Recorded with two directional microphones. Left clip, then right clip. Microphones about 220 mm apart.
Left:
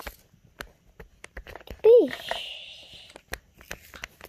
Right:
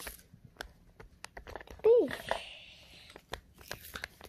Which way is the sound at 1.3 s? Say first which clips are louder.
Left 4 dB; 30° left (ahead or behind).